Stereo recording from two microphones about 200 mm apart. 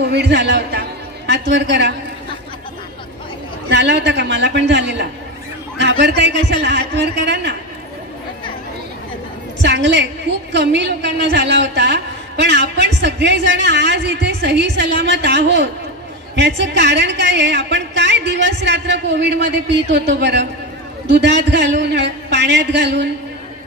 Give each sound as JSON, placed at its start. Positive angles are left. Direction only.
{"t": 0.0, "sound": "a man's voice", "side_deg": -55}
{"t": 3.7, "sound": "a woman's voice", "side_deg": -60}
{"t": 9.6, "sound": "a woman's voice", "side_deg": -60}